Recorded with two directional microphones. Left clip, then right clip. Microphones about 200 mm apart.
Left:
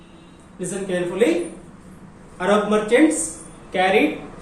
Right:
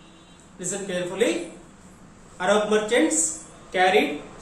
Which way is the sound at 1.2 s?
10° right (ahead or behind).